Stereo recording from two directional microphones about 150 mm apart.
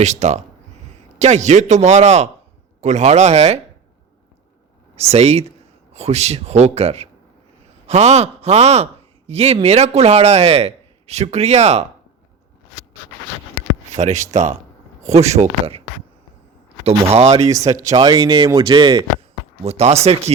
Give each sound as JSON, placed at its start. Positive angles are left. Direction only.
{"t": 0.0, "sound": "a man's voice", "side_deg": -50}
{"t": 4.9, "sound": "a man's voice", "side_deg": -45}
{"t": 13.9, "sound": "a man's voice", "side_deg": -50}
{"t": 16.8, "sound": "a man's voice", "side_deg": -45}
{"t": 17.5, "sound": "speech", "side_deg": -20}
{"t": 19.6, "sound": "a man's voice", "side_deg": -45}